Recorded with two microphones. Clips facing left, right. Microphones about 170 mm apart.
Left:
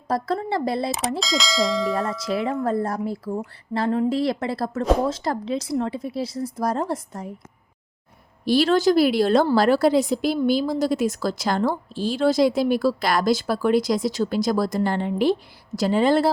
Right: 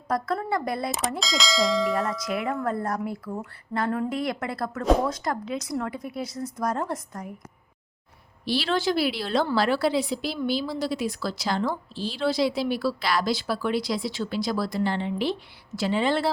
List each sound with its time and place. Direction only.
0.1 s a woman's voice: 30° left (ahead or behind)
1.2 s bell: centre (ahead or behind)
2.2 s a woman's voice: 30° left (ahead or behind)
8.4 s a woman's voice: 45° left (ahead or behind)